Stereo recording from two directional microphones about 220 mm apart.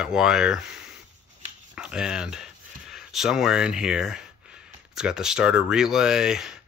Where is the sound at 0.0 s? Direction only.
5° right (ahead or behind).